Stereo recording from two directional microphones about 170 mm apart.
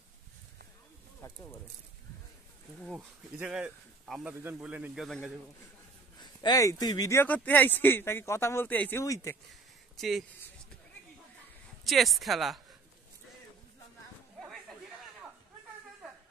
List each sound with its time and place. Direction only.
1.2 s speech: 15° left (ahead or behind)
2.8 s speech: centre (ahead or behind)
6.1 s speech: 25° left (ahead or behind)
9.5 s a sound: centre (ahead or behind)
11.8 s speech: centre (ahead or behind)